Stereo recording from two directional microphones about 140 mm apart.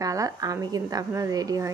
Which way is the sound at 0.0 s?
25° right (ahead or behind).